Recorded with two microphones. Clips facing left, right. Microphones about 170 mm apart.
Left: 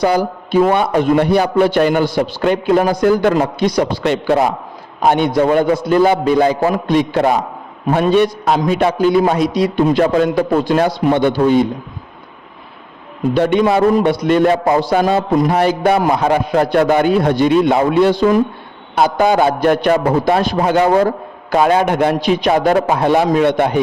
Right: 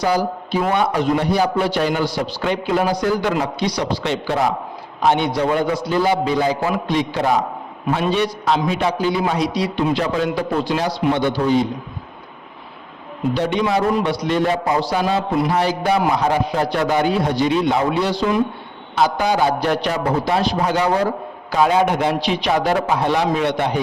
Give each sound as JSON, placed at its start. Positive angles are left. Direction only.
{"t": 0.0, "sound": "a man's voice", "side_deg": 60}
{"t": 13.3, "sound": "speech", "side_deg": 55}